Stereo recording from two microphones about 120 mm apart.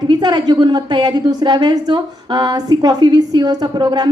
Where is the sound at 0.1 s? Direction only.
35° right (ahead or behind).